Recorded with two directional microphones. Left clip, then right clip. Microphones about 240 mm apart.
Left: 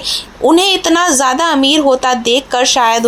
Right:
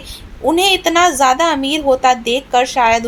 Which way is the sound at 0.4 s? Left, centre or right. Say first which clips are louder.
Left 3 dB; centre.